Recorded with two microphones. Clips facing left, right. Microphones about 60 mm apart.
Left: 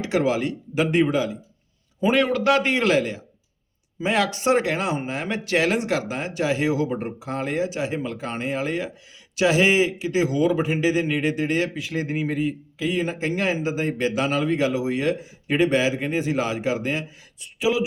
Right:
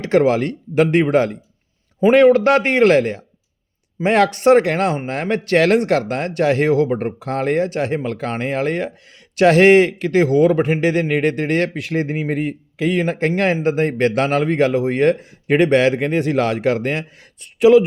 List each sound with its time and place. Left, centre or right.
0.0 s speech: right
2.0 s speech: right